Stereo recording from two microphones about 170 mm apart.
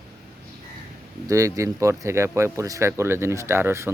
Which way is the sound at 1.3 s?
20° right (ahead or behind).